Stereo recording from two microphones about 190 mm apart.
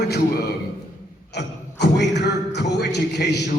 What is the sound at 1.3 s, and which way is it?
A man's voice, 65° left (ahead or behind).